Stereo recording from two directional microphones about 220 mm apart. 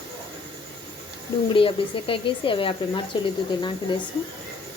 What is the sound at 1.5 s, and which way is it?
Speech, 25° left (ahead or behind).